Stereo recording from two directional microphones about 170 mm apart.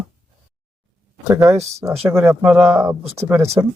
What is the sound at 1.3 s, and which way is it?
Speech, 15° right (ahead or behind).